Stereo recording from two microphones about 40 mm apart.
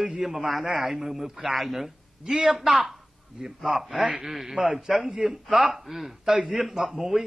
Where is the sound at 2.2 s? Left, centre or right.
Centre.